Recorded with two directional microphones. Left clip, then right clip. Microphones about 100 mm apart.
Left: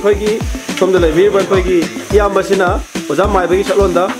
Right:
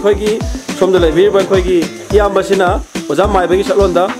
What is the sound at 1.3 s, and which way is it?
Speech, centre (ahead or behind).